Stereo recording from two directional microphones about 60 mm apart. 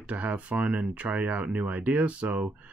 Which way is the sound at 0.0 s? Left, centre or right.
Right.